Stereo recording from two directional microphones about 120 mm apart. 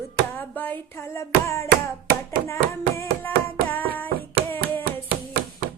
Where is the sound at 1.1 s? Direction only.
25° left (ahead or behind).